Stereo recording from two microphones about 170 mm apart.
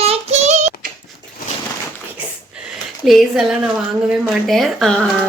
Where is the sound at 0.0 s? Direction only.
40° right (ahead or behind).